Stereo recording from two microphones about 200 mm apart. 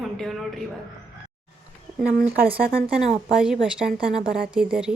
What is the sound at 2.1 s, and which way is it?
Speech, 50° right (ahead or behind).